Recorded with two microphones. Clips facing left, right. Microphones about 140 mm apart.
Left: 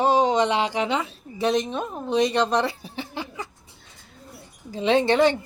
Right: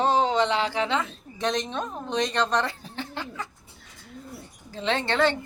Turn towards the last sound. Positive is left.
turn(degrees=15)  # may be behind; listen again after turning